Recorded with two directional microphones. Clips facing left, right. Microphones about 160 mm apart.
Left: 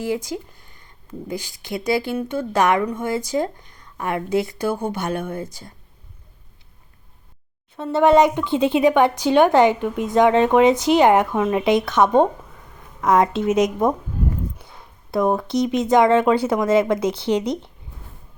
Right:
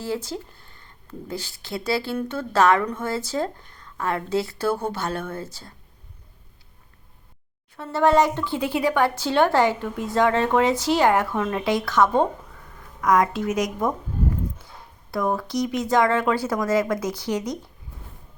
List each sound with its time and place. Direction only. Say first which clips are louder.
0.0 s speech: left 4 dB; 15° left (ahead or behind)
7.8 s speech: left 4 dB; 20° left (ahead or behind)
15.1 s speech: left 5 dB; 20° left (ahead or behind)